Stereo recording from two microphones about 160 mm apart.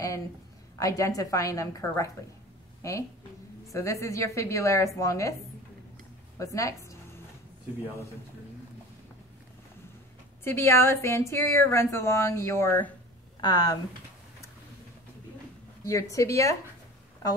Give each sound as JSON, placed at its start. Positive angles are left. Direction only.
{"t": 0.7, "sound": "a woman's voice", "side_deg": 20}
{"t": 6.3, "sound": "a woman's voice", "side_deg": 20}
{"t": 10.4, "sound": "speech", "side_deg": 15}
{"t": 13.4, "sound": "speech", "side_deg": 25}
{"t": 15.8, "sound": "a woman's voice", "side_deg": 20}